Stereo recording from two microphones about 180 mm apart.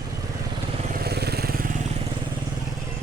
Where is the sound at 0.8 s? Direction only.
50° right (ahead or behind).